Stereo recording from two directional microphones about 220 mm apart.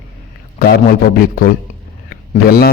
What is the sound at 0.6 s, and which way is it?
A man's voice, 45° left (ahead or behind).